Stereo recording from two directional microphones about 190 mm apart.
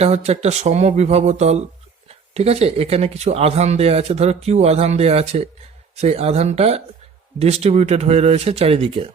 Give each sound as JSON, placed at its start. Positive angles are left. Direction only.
{"t": 0.0, "sound": "speech", "side_deg": -35}